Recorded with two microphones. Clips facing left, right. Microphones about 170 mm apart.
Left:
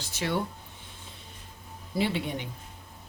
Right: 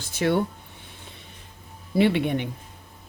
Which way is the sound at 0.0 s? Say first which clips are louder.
Right 8 dB; 55° right (ahead or behind).